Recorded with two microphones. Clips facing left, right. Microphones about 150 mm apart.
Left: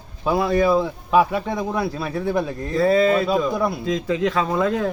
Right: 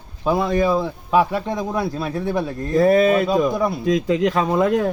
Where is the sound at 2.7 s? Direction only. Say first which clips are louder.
Right 2 dB; 20° right (ahead or behind).